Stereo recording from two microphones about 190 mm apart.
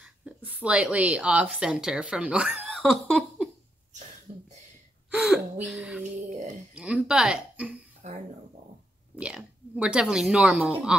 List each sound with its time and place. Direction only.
0.0 s a woman's voice: 5° right (ahead or behind)
4.3 s a sound: 30° right (ahead or behind)
5.1 s speech: centre (ahead or behind)
8.0 s speech: 40° right (ahead or behind)
9.1 s speech: 5° right (ahead or behind)